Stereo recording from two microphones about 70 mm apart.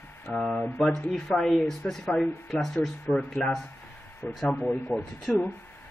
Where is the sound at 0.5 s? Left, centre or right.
Centre.